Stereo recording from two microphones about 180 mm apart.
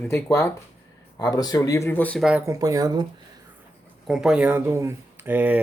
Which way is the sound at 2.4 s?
20° right (ahead or behind).